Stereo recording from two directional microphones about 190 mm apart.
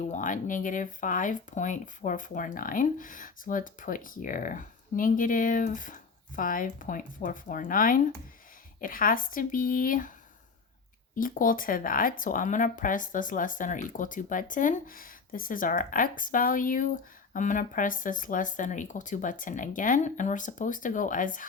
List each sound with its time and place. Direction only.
0.0 s speech: 40° left (ahead or behind)
11.1 s speech: 45° left (ahead or behind)